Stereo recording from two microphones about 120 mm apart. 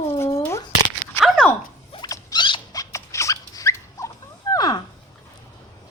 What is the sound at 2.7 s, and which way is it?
Dog, 25° left (ahead or behind).